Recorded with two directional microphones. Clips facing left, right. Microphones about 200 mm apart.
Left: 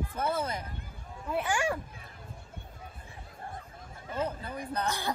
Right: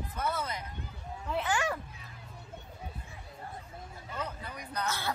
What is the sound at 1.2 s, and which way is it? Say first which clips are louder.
Speech: left 2 dB; 10° left (ahead or behind).